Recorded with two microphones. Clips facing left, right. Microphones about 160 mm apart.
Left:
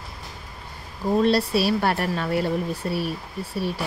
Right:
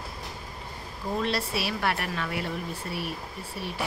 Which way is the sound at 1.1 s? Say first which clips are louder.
Left 9 dB; 35° left (ahead or behind).